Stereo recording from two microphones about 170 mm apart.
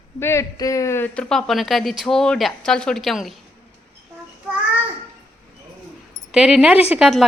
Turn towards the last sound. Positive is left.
turn(degrees=-5)  # may be behind; listen again after turning